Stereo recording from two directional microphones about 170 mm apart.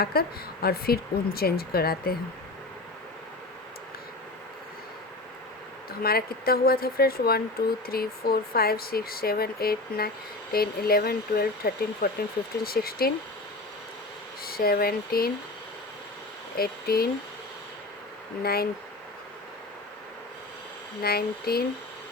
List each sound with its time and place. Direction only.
0.0 s speech: 65° left (ahead or behind)
6.0 s speech: 65° left (ahead or behind)
14.4 s speech: 60° left (ahead or behind)
16.6 s speech: 65° left (ahead or behind)
18.4 s speech: 65° left (ahead or behind)
21.0 s speech: 65° left (ahead or behind)